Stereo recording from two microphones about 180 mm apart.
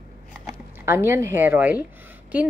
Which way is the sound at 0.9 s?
15° right (ahead or behind).